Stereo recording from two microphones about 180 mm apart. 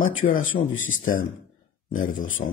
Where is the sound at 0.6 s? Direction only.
90° left.